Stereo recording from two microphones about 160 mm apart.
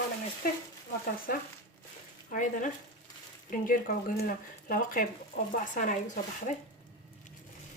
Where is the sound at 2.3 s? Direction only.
55° left (ahead or behind).